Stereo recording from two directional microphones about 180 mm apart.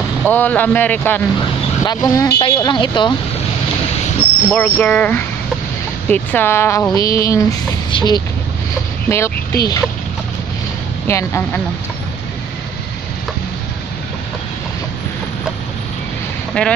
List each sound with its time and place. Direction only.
0.2 s speech: 10° left (ahead or behind); by 3.2 s 25° left (ahead or behind)
4.5 s speech: 10° left (ahead or behind)
11.1 s speech: 15° left (ahead or behind)
16.6 s speech: 5° left (ahead or behind)